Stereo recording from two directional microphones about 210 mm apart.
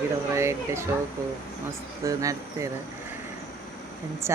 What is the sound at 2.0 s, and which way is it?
Speech, 15° right (ahead or behind).